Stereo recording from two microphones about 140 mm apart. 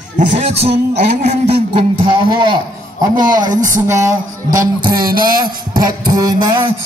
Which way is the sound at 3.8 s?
20° right (ahead or behind).